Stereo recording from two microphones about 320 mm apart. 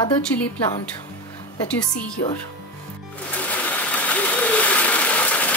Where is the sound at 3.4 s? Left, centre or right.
Centre.